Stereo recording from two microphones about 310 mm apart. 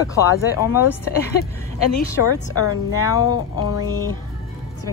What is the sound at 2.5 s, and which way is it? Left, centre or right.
Speech, left.